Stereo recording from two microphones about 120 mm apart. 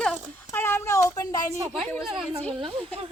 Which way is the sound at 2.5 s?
45° right (ahead or behind).